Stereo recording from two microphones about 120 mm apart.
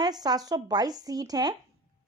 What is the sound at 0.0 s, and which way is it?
Speech, 35° right (ahead or behind).